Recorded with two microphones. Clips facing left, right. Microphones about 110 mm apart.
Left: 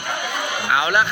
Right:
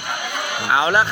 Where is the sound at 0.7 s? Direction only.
30° right (ahead or behind).